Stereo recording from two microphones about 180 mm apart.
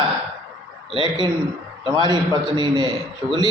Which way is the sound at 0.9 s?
25° right (ahead or behind).